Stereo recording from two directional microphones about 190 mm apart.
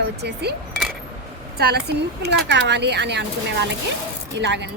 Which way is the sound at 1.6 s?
55° right (ahead or behind).